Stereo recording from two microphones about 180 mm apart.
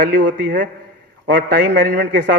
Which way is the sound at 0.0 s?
50° right (ahead or behind).